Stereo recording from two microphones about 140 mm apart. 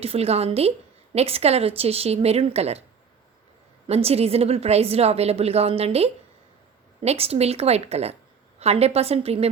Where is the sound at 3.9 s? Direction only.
45° right (ahead or behind).